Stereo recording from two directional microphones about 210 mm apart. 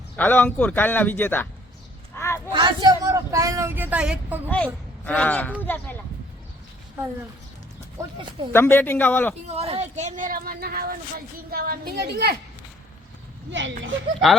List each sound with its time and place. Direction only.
0.2 s speech: 10° left (ahead or behind)
2.1 s a sound: 10° left (ahead or behind)
2.5 s speech: 20° right (ahead or behind); by 4.4 s 5° right (ahead or behind)
4.4 s speech: 5° left (ahead or behind)
8.0 s speech: 15° right (ahead or behind)
8.5 s speech: 10° left (ahead or behind)
9.6 s a woman's voice: 30° right (ahead or behind); by 12.4 s 50° right (ahead or behind)
13.5 s speech: 60° right (ahead or behind)